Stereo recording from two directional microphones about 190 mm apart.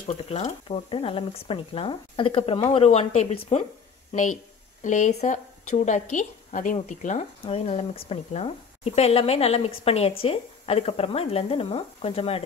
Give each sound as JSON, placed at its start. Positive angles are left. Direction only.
{"t": 0.1, "sound": "a woman's voice", "side_deg": 30}